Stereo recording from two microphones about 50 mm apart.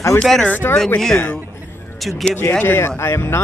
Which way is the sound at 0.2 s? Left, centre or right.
Centre.